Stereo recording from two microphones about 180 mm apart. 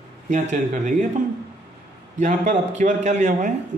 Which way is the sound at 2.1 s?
45° right (ahead or behind).